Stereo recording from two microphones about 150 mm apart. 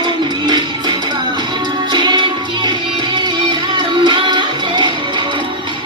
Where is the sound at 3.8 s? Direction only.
30° right (ahead or behind).